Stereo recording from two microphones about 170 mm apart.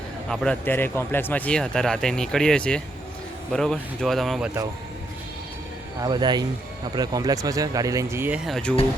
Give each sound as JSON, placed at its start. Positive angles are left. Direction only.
{"t": 0.3, "sound": "speech", "side_deg": 10}
{"t": 6.0, "sound": "speech", "side_deg": -25}
{"t": 8.4, "sound": "speech", "side_deg": 5}